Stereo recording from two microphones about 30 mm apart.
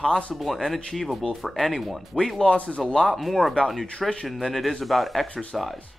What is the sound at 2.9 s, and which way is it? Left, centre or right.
Speech, centre.